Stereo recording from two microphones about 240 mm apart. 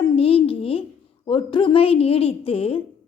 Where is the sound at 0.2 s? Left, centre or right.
Left.